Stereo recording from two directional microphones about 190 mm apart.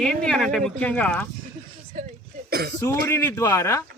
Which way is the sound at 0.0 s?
5° left (ahead or behind).